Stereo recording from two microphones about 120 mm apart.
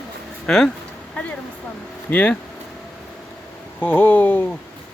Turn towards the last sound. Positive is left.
turn(degrees=15)  # may be behind; listen again after turning